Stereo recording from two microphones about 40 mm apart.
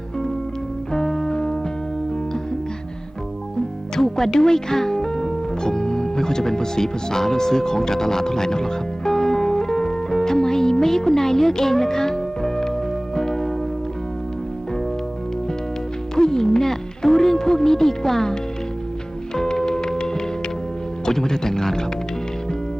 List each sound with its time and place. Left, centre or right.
0.9 s music: centre
3.9 s speech: centre
13.1 s church bell: centre
16.1 s music: centre
19.4 s music: centre
21.0 s speech: centre